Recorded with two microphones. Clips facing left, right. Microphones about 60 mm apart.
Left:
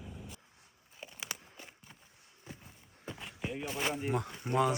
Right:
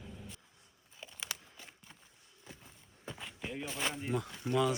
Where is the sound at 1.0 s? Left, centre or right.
Centre.